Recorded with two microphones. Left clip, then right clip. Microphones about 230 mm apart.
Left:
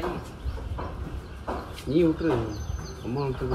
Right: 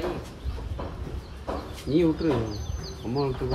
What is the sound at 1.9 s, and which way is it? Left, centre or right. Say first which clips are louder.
Speech: even; right.